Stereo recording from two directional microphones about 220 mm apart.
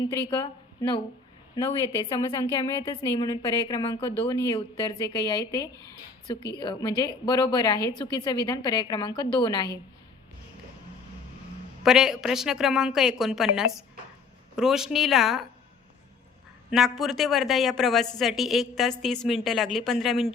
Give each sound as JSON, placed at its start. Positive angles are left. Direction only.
{"t": 0.0, "sound": "a woman's voice", "side_deg": 20}
{"t": 11.8, "sound": "a woman's voice", "side_deg": 0}
{"t": 16.7, "sound": "a woman's voice", "side_deg": 0}